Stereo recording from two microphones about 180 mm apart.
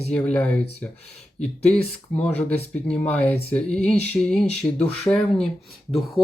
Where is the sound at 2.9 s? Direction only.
10° left (ahead or behind).